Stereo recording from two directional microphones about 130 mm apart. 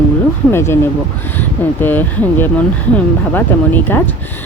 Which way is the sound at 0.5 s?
20° left (ahead or behind).